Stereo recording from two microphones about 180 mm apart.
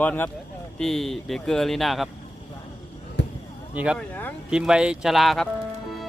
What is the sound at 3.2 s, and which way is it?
Basketball bounce, 75° left (ahead or behind).